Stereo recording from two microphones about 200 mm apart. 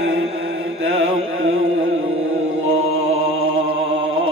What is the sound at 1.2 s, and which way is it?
Music, 90° right.